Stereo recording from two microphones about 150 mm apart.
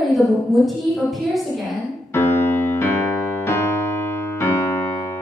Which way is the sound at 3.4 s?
15° left (ahead or behind).